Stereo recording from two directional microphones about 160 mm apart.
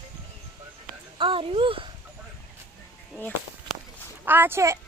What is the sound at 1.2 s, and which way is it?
Speech, 35° right (ahead or behind).